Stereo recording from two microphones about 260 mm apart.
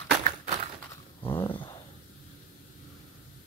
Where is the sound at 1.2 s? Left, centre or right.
Centre.